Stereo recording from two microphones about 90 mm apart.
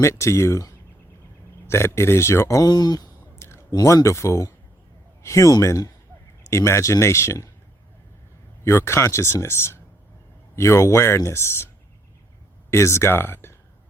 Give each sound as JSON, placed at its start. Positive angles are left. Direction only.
{"t": 0.0, "sound": "speech", "side_deg": 35}
{"t": 2.6, "sound": "speech", "side_deg": 50}
{"t": 3.3, "sound": "a sound", "side_deg": 30}
{"t": 3.8, "sound": "a man's voice", "side_deg": 35}
{"t": 8.6, "sound": "speech", "side_deg": 30}
{"t": 12.7, "sound": "speech", "side_deg": 30}